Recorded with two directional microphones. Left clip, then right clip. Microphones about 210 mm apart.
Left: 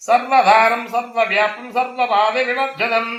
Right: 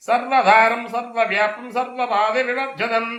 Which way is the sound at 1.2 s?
30° left (ahead or behind).